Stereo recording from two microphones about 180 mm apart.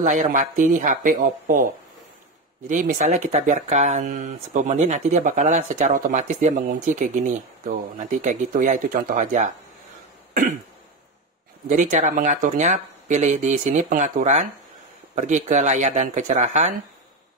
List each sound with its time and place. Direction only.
0.0 s speech: 45° right (ahead or behind)
11.7 s speech: 45° right (ahead or behind)